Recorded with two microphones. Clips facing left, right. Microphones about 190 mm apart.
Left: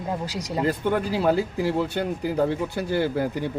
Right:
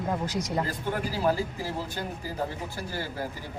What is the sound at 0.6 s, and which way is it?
Speech, 65° left (ahead or behind).